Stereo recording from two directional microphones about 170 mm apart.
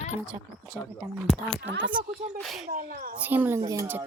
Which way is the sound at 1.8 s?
25° right (ahead or behind).